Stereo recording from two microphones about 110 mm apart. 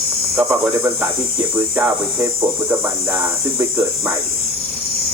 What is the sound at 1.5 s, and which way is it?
Speech, 20° right (ahead or behind).